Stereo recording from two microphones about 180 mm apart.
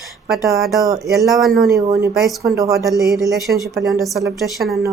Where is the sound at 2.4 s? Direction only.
15° right (ahead or behind).